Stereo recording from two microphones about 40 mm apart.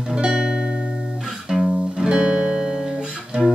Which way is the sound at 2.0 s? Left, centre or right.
Right.